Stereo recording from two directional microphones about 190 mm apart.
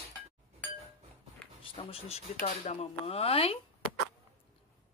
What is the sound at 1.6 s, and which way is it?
Speech, 30° left (ahead or behind).